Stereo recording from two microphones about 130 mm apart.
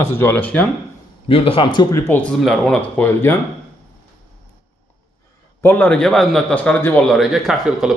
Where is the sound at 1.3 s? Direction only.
45° left (ahead or behind).